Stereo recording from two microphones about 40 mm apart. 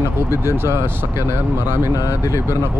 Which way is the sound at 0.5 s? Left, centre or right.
Right.